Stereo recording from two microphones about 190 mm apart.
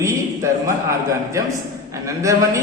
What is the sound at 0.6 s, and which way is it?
A man's voice, 15° right (ahead or behind).